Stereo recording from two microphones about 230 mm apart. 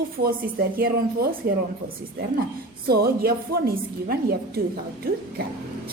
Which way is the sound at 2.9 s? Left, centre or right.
Right.